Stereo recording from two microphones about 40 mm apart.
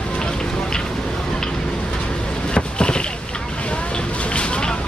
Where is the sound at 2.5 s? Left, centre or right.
Left.